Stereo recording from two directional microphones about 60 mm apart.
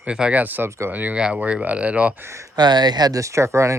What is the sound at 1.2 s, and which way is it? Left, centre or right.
Speech, centre.